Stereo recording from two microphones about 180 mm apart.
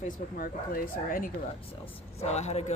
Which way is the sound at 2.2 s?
40° left (ahead or behind).